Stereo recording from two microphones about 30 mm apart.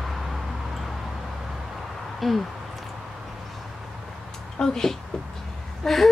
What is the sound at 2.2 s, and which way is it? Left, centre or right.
Speech, centre.